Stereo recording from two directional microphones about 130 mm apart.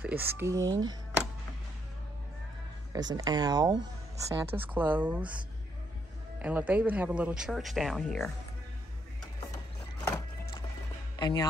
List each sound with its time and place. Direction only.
0.0 s speech: 15° right (ahead or behind)
2.9 s speech: 30° right (ahead or behind)
4.5 s speech: 15° right (ahead or behind)
6.4 s speech: 10° right (ahead or behind)
11.1 s speech: 35° left (ahead or behind)